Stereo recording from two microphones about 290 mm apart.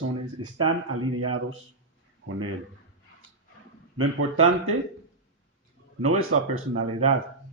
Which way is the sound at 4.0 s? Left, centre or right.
Right.